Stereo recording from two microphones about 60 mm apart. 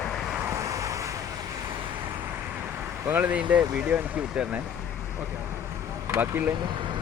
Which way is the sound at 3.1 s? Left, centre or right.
Right.